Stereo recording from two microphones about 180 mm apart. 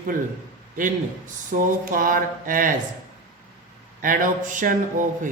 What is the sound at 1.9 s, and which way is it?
Speech, 50° right (ahead or behind).